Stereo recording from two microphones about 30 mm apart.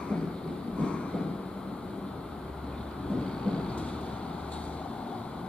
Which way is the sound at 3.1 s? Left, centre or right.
Left.